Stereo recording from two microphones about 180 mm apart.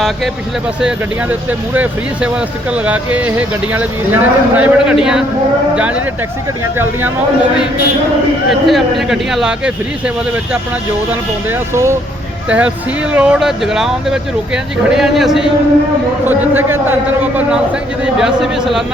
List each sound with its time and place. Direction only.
0.8 s speech: 5° right (ahead or behind)
8.4 s speech: centre (ahead or behind)
11.7 s speech: 15° right (ahead or behind)
18.0 s speech: 5° right (ahead or behind)